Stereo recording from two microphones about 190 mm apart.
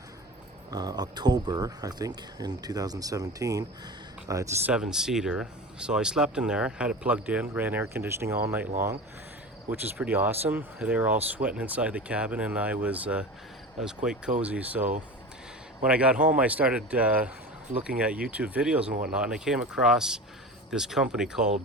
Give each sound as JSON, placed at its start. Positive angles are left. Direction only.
{"t": 0.7, "sound": "speech", "side_deg": -20}
{"t": 4.7, "sound": "speech", "side_deg": -5}
{"t": 10.0, "sound": "speech", "side_deg": -10}